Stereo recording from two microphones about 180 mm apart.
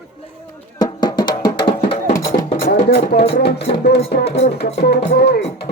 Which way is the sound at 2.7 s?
60° left (ahead or behind).